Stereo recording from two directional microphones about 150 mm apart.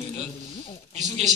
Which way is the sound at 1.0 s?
50° right (ahead or behind).